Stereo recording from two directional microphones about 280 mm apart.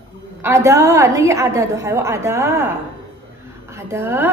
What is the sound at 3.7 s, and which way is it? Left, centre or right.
Speech, centre.